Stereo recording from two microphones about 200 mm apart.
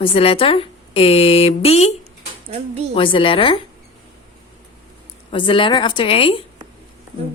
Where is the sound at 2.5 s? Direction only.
30° right (ahead or behind).